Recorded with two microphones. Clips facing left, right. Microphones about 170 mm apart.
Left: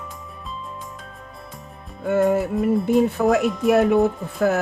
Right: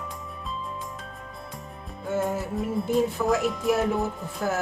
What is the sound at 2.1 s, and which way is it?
Speech, 65° left (ahead or behind).